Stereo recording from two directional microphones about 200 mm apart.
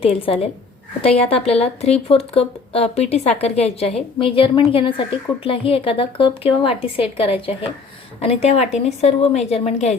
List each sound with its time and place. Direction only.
0.0 s a woman's voice: 30° left (ahead or behind)